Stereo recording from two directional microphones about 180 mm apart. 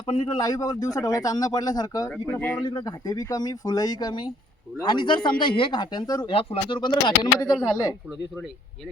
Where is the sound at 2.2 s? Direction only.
10° left (ahead or behind).